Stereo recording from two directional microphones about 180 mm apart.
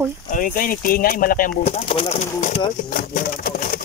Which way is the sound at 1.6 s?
35° left (ahead or behind).